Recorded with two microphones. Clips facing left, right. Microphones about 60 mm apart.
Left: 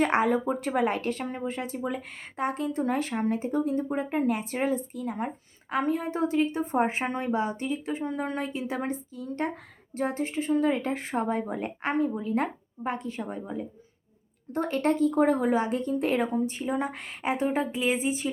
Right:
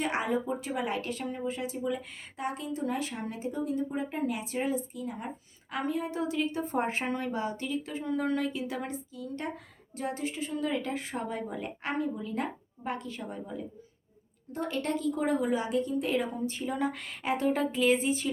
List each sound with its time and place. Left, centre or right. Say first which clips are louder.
0.0 s speech: left 6 dB; left
5.7 s speech: left 4 dB; left